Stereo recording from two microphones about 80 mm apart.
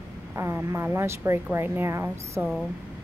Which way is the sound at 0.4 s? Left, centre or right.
Right.